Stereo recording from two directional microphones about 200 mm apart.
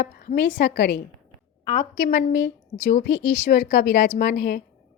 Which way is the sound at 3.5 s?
45° left (ahead or behind).